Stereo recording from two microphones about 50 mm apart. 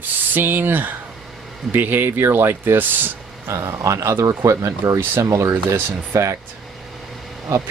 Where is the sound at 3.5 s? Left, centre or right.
Right.